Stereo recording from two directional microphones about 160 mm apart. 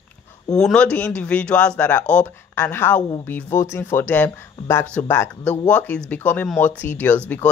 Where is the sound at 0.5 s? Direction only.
5° left (ahead or behind).